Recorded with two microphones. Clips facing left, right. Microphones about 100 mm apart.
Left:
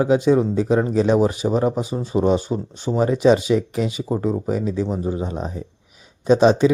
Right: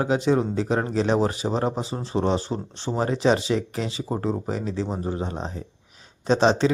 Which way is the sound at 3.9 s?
10° left (ahead or behind).